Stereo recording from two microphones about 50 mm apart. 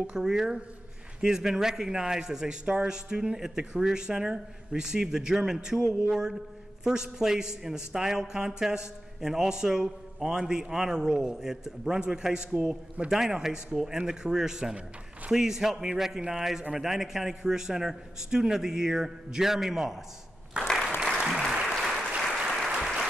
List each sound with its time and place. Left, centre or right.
0.0 s a man's voice: centre
12.6 s a man's voice: right
13.1 s a man's voice: centre
20.5 s applause: right
21.5 s applause: centre